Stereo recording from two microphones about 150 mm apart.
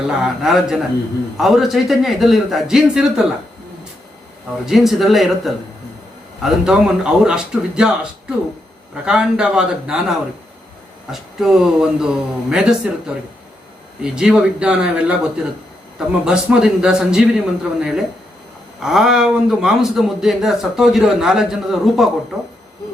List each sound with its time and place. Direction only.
0.1 s a man's voice: 5° right (ahead or behind)
4.6 s a man's voice: centre (ahead or behind)
6.4 s a man's voice: 5° right (ahead or behind)
9.0 s a man's voice: 5° right (ahead or behind)